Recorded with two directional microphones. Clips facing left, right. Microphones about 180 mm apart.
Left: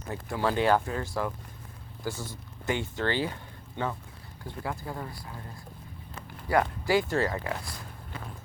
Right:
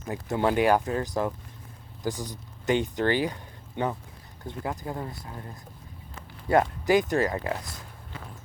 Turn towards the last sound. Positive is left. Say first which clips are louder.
# right 2 dB
turn(degrees=-20)  # may be behind; listen again after turning